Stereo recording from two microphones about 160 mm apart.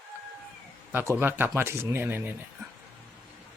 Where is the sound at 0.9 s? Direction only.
15° right (ahead or behind).